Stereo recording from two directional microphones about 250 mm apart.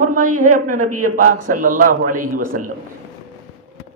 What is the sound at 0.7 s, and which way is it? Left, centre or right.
Speech, right.